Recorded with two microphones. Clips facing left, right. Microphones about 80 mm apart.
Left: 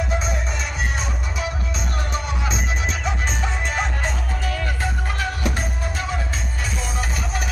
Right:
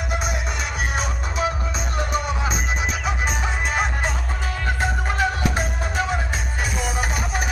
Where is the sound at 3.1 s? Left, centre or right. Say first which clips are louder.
Right 1 dB; centre.